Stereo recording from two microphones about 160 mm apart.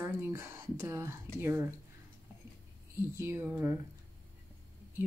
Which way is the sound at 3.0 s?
15° right (ahead or behind).